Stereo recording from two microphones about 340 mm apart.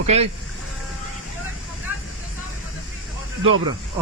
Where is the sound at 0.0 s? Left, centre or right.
Centre.